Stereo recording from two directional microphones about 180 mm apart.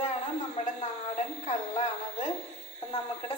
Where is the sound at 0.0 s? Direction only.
40° left (ahead or behind).